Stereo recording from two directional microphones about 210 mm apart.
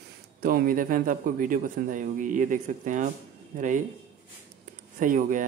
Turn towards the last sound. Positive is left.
turn(degrees=-40)  # may be behind; listen again after turning